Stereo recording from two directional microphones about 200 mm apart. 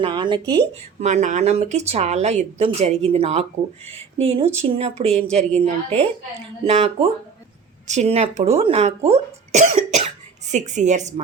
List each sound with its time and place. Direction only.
0.0 s speech: 25° right (ahead or behind)
0.4 s speech: 10° left (ahead or behind)
0.9 s speech: 35° right (ahead or behind)